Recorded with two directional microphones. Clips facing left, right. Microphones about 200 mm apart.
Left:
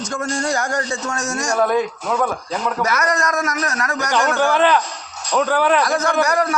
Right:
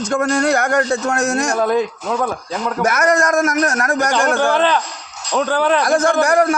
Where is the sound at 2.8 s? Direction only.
50° right (ahead or behind).